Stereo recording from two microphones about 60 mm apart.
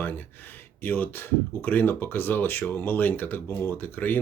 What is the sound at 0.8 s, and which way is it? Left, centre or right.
Speech, left.